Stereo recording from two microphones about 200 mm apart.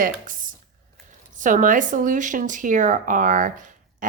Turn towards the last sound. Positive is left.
turn(degrees=-40)  # may be behind; listen again after turning